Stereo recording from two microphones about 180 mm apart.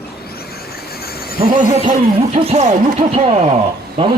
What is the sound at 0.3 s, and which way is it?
Vehicle, 60° left (ahead or behind).